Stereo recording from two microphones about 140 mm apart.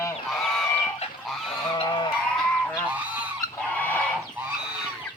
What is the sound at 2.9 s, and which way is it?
Goose, 10° right (ahead or behind).